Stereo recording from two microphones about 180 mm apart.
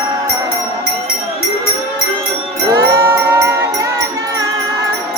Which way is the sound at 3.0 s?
15° right (ahead or behind).